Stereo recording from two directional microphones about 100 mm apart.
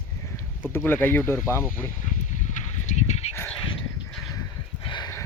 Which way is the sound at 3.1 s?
90° left.